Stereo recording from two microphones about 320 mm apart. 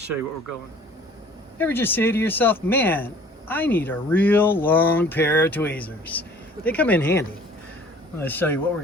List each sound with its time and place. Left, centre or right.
1.5 s speech: centre